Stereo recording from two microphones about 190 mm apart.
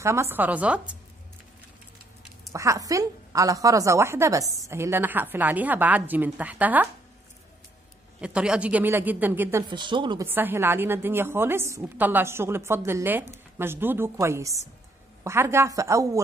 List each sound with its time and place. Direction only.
0.0 s a woman's voice: 15° right (ahead or behind)
2.5 s a woman's voice: 15° right (ahead or behind)
8.2 s a woman's voice: 5° right (ahead or behind)
9.7 s speech: 25° right (ahead or behind)
10.2 s a woman's voice: 10° right (ahead or behind)